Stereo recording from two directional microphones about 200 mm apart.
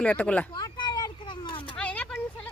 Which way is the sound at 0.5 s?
20° left (ahead or behind).